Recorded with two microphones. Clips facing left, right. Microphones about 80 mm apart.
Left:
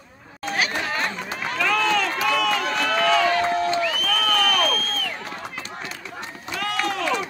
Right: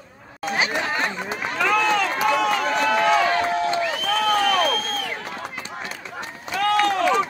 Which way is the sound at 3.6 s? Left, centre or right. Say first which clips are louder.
Even; right.